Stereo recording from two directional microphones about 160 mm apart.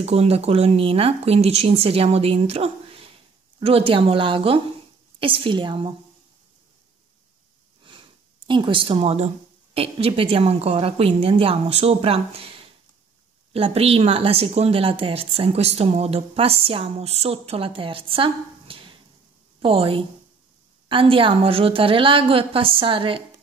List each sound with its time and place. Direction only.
0.0 s speech: 40° right (ahead or behind)
7.8 s a sound: 30° right (ahead or behind)
9.8 s speech: 35° right (ahead or behind)